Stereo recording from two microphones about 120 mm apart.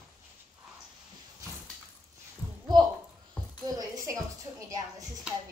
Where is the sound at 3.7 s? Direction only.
30° right (ahead or behind).